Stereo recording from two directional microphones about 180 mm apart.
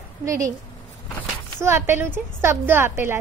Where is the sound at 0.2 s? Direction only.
15° right (ahead or behind).